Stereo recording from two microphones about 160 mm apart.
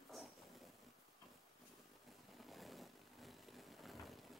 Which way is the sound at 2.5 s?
Centre (ahead or behind).